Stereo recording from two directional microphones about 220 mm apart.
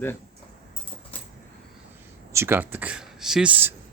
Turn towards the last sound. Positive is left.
turn(degrees=-10)  # may be behind; listen again after turning